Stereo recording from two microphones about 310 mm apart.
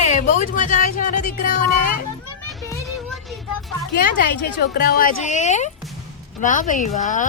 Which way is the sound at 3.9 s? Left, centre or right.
Left.